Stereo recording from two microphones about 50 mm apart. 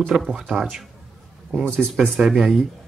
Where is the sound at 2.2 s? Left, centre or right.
Centre.